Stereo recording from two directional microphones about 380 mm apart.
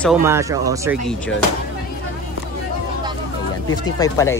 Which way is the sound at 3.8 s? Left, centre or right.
Centre.